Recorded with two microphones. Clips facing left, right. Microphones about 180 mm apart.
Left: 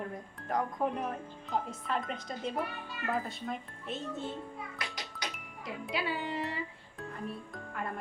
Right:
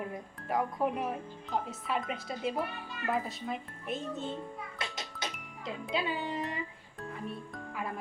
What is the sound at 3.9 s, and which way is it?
Speech, 20° right (ahead or behind).